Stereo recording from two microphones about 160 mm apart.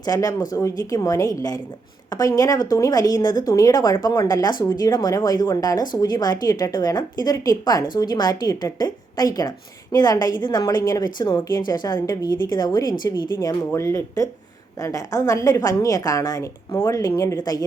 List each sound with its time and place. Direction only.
0.0 s a woman's voice: 25° left (ahead or behind)